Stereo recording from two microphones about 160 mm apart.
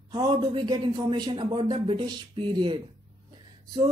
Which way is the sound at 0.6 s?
25° right (ahead or behind).